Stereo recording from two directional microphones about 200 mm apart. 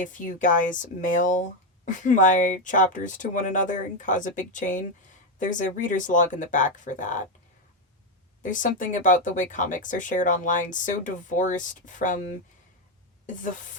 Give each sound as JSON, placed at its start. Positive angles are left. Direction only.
{"t": 0.0, "sound": "speech", "side_deg": 40}
{"t": 8.4, "sound": "speech", "side_deg": 40}